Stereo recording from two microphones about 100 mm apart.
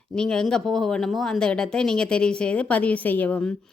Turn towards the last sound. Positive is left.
turn(degrees=10)  # may be behind; listen again after turning